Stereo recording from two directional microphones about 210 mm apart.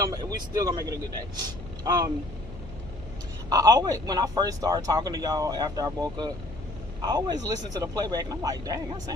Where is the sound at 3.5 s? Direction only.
15° right (ahead or behind).